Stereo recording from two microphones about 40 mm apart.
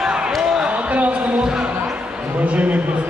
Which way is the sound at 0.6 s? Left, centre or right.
Right.